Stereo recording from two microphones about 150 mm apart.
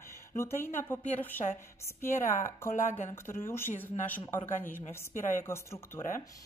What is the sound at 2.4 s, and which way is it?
Speech, 15° left (ahead or behind).